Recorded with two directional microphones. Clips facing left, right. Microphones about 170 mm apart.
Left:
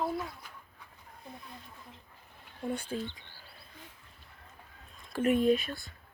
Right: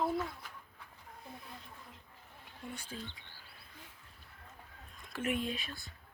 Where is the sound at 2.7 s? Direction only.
55° left (ahead or behind).